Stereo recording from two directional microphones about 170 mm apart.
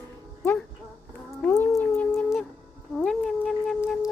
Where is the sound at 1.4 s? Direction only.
10° left (ahead or behind).